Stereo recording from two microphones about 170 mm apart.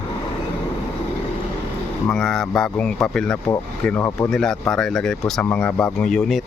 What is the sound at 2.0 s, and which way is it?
Speech, 5° left (ahead or behind).